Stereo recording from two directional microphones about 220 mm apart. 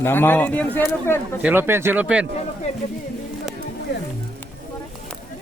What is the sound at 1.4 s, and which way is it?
Speech, 10° right (ahead or behind).